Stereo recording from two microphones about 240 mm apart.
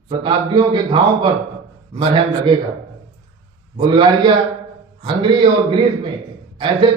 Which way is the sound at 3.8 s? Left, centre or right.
Centre.